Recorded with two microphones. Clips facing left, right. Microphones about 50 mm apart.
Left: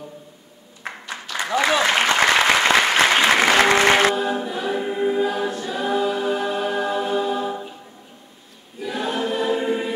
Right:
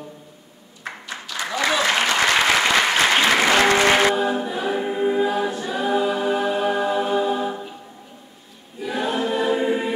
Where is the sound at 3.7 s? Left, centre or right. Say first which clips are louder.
Left 1 dB; centre.